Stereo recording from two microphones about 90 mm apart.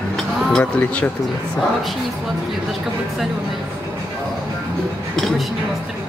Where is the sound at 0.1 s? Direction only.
5° left (ahead or behind).